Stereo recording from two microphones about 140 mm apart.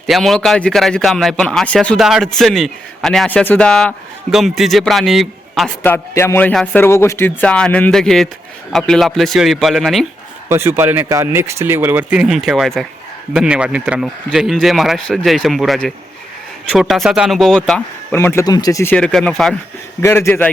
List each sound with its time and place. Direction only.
0.1 s a man's voice: centre (ahead or behind)
5.8 s speech: 15° left (ahead or behind)
6.5 s a man's voice: 5° left (ahead or behind)
6.8 s a man's voice: 20° left (ahead or behind); by 10.1 s centre (ahead or behind)
10.5 s a man's voice: 15° right (ahead or behind); by 17.8 s 5° left (ahead or behind)
18.1 s speech: 20° left (ahead or behind)
20.0 s speech: 15° left (ahead or behind)